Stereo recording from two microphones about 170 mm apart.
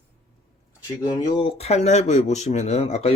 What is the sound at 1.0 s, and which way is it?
Speech, 25° left (ahead or behind).